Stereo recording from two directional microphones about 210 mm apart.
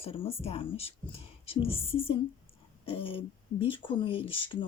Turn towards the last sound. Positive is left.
turn(degrees=25)  # may be behind; listen again after turning